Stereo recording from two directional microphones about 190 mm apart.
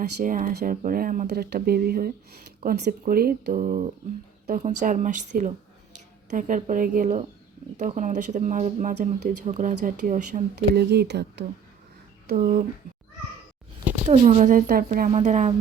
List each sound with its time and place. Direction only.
0.2 s speech: 45° right (ahead or behind)
1.3 s speech: 55° right (ahead or behind)
10.8 s speech: 60° right (ahead or behind)
12.3 s speech: 50° right (ahead or behind)
14.1 s speech: 40° right (ahead or behind)